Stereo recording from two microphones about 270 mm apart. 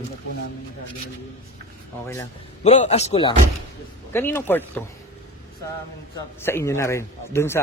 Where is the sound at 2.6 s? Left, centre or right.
Left.